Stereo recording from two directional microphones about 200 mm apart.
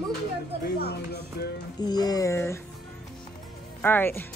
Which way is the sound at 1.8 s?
20° left (ahead or behind).